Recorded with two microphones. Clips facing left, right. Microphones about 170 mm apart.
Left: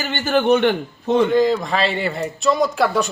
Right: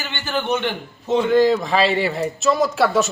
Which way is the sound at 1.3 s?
Centre (ahead or behind).